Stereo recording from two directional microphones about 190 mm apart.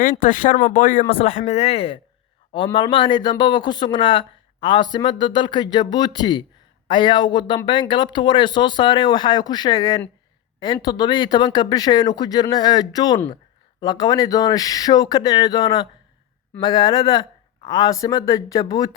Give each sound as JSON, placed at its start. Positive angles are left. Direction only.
{"t": 0.0, "sound": "speech", "side_deg": 45}
{"t": 1.1, "sound": "speech", "side_deg": 35}